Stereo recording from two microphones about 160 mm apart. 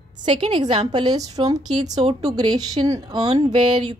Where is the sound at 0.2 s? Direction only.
30° right (ahead or behind).